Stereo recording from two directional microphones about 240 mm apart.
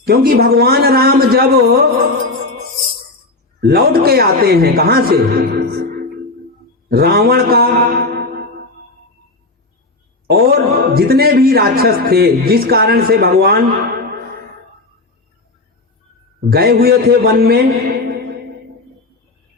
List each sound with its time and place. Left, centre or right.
0.0 s a man's voice: right
3.6 s a man's voice: right
6.9 s a man's voice: right
10.2 s a man's voice: right
16.5 s a man's voice: right